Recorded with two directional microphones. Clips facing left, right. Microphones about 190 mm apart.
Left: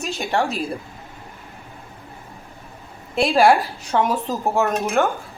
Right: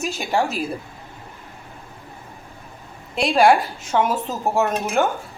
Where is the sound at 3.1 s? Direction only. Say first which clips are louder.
Even; centre (ahead or behind).